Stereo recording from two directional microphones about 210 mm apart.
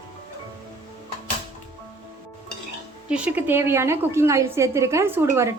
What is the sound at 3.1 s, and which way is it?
A woman's voice, 5° right (ahead or behind).